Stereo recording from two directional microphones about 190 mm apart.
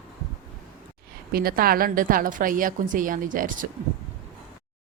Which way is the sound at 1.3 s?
50° right (ahead or behind).